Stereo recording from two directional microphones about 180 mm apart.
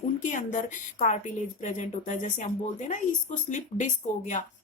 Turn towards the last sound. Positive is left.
turn(degrees=40)  # may be behind; listen again after turning